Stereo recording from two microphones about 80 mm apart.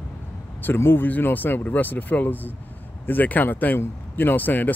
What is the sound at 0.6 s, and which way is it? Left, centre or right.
Speech, left.